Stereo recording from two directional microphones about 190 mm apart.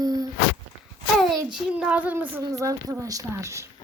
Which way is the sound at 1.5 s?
5° right (ahead or behind).